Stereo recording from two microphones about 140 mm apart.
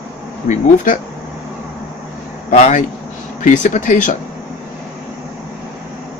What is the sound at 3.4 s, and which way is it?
Speech, 65° left (ahead or behind).